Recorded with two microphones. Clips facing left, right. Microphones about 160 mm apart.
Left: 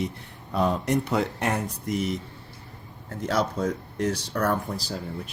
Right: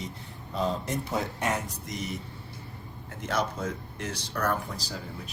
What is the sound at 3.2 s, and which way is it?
Speech, 30° left (ahead or behind).